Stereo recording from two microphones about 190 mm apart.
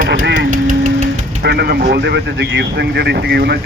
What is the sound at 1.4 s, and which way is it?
Speech, 60° right (ahead or behind).